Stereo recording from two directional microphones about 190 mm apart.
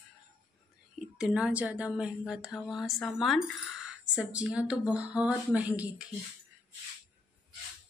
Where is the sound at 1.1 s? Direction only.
5° right (ahead or behind).